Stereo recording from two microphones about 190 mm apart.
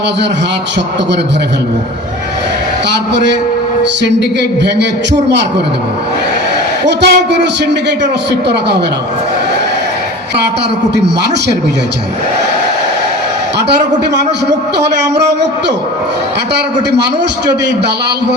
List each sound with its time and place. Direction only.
4.0 s a man's voice: 65° right (ahead or behind)
6.8 s a man's voice: 65° right (ahead or behind)
10.9 s a man's voice: 65° right (ahead or behind)